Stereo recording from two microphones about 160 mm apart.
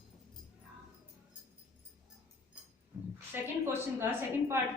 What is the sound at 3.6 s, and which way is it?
Speech, 15° right (ahead or behind).